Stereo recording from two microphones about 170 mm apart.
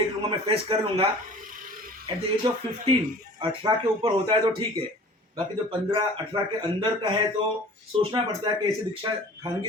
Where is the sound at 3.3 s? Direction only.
30° right (ahead or behind).